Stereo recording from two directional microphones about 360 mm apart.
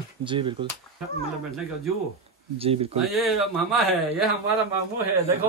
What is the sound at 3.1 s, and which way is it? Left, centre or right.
Speech, centre.